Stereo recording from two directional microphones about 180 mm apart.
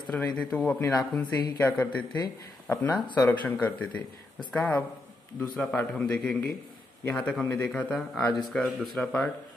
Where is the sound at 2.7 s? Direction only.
10° left (ahead or behind).